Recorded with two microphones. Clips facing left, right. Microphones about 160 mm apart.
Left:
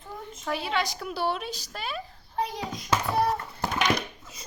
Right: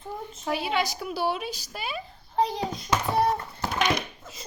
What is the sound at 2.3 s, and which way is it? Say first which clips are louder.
A child's voice: right 5 dB; 30° right (ahead or behind).